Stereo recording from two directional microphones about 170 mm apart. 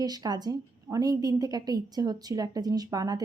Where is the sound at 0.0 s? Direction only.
25° right (ahead or behind).